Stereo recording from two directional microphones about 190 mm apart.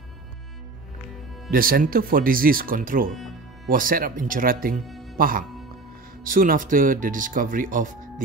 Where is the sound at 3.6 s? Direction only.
50° right (ahead or behind).